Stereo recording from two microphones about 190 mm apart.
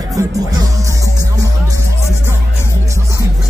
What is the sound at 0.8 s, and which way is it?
Music, 15° right (ahead or behind).